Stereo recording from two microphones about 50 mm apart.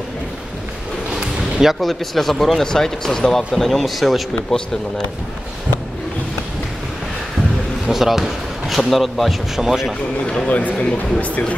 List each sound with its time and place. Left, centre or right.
1.1 s speech: centre
7.9 s speech: centre
10.2 s a man's voice: centre
10.5 s speech: left